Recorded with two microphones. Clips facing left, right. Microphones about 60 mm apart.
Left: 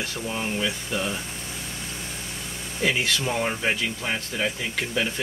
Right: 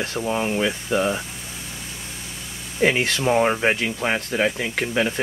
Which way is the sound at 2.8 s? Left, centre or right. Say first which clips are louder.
Right 5 dB; right.